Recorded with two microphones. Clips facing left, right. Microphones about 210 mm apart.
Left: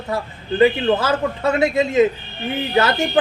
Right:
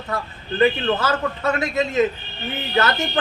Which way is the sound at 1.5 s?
30° left (ahead or behind).